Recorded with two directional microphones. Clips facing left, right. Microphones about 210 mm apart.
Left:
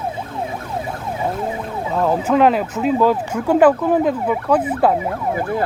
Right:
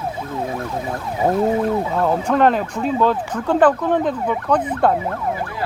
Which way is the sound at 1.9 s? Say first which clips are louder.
Left 1 dB; centre (ahead or behind).